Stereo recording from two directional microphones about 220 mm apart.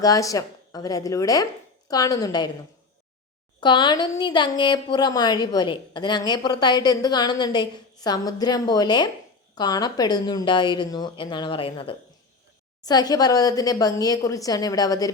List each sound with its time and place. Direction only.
0.0 s a woman's voice: 15° left (ahead or behind)
3.6 s a woman's voice: 20° left (ahead or behind)